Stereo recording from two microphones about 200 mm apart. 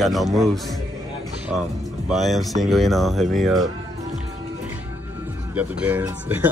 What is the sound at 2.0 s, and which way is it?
Speech, centre (ahead or behind).